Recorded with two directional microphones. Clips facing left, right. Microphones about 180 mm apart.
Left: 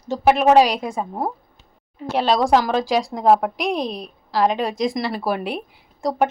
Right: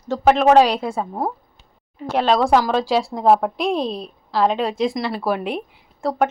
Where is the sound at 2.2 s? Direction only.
35° left (ahead or behind).